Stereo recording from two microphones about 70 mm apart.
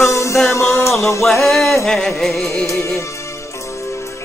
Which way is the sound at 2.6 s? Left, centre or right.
Left.